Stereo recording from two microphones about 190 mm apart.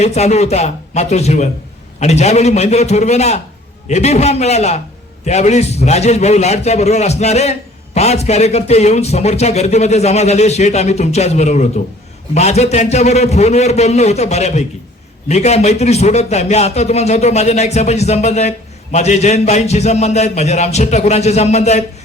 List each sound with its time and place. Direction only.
0.0 s speech: 35° left (ahead or behind)